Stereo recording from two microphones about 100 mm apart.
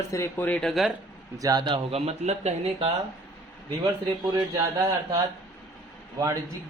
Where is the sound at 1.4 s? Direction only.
40° right (ahead or behind).